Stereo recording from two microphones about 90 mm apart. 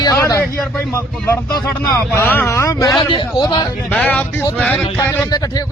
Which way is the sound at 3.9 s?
15° left (ahead or behind).